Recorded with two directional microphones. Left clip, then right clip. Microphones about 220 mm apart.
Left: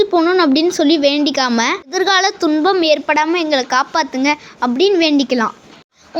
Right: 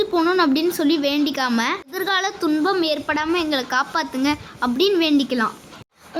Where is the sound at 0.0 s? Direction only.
10° left (ahead or behind).